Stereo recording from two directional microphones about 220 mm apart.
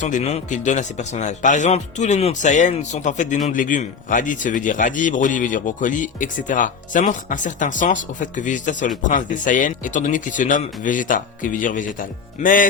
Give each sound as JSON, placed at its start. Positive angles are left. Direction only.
{"t": 0.0, "sound": "speech", "side_deg": 30}